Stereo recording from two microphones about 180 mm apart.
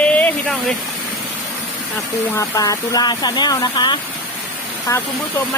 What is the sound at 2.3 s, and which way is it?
Speech, 15° left (ahead or behind).